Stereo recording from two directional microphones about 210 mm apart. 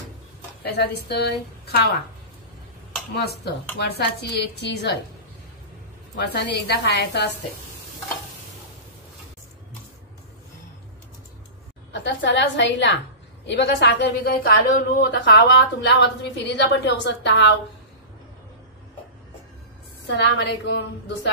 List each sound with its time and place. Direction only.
0.7 s speech: 50° left (ahead or behind)
3.2 s speech: 50° left (ahead or behind)
6.1 s speech: 55° left (ahead or behind)
11.9 s a woman's voice: 55° left (ahead or behind)
15.2 s a woman's voice: 55° left (ahead or behind)
20.2 s a woman's voice: 55° left (ahead or behind)